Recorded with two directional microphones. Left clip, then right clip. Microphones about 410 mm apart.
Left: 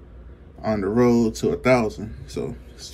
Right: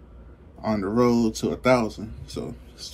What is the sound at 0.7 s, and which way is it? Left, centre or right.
Speech, centre.